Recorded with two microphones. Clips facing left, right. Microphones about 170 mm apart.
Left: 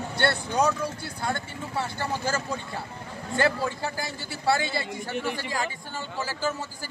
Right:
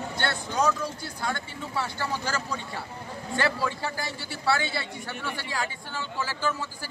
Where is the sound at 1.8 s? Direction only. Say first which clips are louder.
Left 1 dB; 50° left (ahead or behind).